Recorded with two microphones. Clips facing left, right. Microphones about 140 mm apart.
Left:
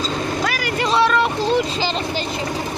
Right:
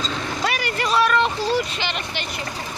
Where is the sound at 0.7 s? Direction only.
25° left (ahead or behind).